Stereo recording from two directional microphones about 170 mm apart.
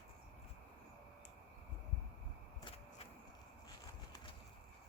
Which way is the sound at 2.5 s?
35° left (ahead or behind).